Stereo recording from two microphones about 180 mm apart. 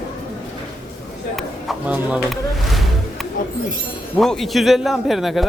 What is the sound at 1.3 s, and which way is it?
Music, 5° right (ahead or behind).